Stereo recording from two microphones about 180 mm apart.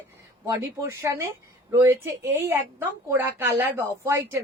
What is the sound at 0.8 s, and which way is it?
A woman's voice, 15° right (ahead or behind).